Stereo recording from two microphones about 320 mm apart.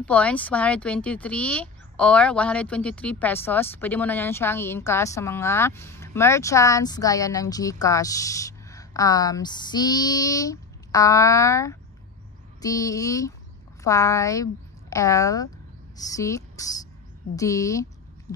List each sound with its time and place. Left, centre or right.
0.0 s speech: centre